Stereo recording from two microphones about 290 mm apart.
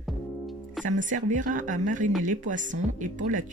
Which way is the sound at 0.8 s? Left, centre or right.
Right.